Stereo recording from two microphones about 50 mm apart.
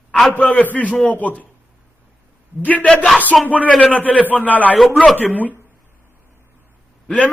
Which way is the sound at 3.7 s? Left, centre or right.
Left.